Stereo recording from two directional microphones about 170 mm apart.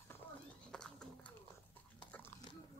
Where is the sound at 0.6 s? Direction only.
5° left (ahead or behind).